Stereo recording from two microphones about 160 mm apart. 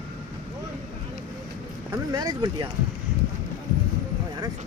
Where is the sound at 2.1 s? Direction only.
25° right (ahead or behind).